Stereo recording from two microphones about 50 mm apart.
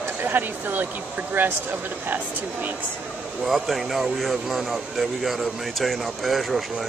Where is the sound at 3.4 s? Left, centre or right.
Centre.